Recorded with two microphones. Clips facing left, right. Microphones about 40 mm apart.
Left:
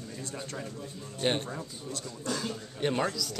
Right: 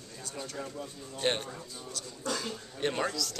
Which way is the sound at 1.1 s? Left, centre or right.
Centre.